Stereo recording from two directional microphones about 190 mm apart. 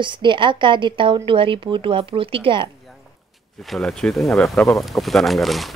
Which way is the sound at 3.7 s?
5° left (ahead or behind).